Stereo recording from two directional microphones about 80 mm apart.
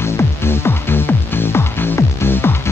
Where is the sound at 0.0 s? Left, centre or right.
Left.